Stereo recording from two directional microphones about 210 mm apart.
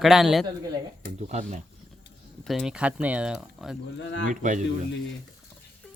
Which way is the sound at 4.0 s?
60° left (ahead or behind).